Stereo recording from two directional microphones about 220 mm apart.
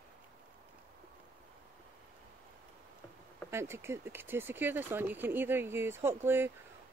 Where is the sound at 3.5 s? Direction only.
10° right (ahead or behind).